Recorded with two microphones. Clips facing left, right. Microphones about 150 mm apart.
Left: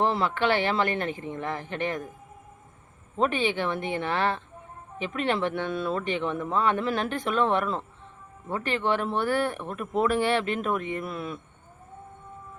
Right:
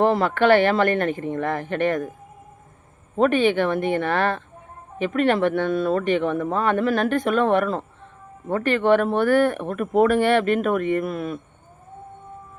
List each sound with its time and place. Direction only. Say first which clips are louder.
0.0 s speech: right 6 dB; 50° right (ahead or behind)
3.2 s speech: right 7 dB; 55° right (ahead or behind)